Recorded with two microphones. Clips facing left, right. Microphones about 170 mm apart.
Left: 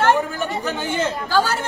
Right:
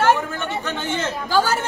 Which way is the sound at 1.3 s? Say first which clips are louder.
Right 2 dB; 10° right (ahead or behind).